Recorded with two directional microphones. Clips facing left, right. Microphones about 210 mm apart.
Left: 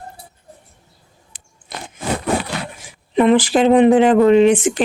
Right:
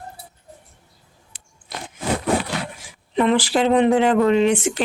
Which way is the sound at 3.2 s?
15° left (ahead or behind).